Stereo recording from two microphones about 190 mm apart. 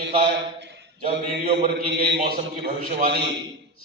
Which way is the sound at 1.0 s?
35° right (ahead or behind).